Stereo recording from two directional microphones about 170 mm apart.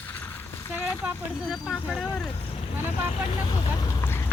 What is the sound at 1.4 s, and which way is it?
Speech, 5° right (ahead or behind).